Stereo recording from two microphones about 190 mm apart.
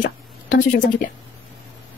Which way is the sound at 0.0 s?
45° left (ahead or behind).